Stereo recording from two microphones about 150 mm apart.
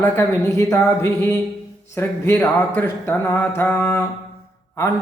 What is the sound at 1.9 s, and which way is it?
Speech, 15° left (ahead or behind).